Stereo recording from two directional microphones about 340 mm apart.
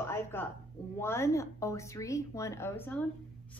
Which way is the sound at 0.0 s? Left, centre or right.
Centre.